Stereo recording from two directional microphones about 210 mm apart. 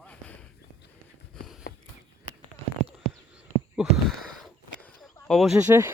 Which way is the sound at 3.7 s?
5° right (ahead or behind).